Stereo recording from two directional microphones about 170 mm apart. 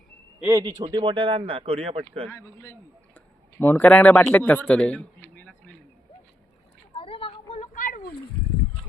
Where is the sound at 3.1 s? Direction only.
10° left (ahead or behind).